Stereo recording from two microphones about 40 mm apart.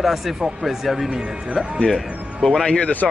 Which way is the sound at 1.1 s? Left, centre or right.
Right.